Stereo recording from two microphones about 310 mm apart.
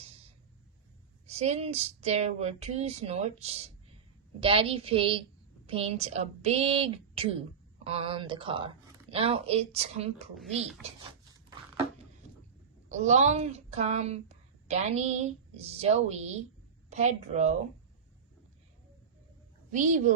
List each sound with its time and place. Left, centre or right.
1.3 s a woman's voice: right
10.6 s speech: centre
12.9 s speech: right
19.7 s speech: right